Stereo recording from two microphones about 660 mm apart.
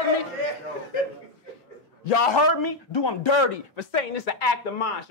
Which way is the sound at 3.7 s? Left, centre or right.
Left.